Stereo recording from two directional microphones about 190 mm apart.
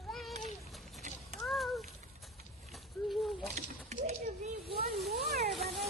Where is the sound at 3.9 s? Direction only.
35° right (ahead or behind).